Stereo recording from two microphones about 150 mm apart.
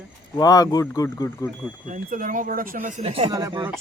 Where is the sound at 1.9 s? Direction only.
65° right (ahead or behind).